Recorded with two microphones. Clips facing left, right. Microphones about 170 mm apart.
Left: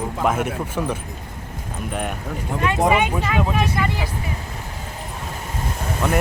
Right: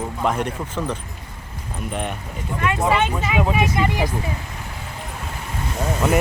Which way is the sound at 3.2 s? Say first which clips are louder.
Right 1 dB; 10° right (ahead or behind).